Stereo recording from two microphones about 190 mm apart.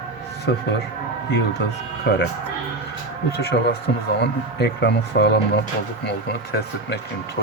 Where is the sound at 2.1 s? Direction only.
60° left (ahead or behind).